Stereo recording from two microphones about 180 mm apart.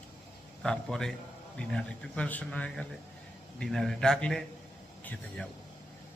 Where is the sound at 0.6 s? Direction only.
5° left (ahead or behind).